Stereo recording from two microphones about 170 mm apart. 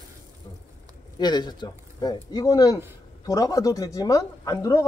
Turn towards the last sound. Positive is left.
turn(degrees=20)  # may be behind; listen again after turning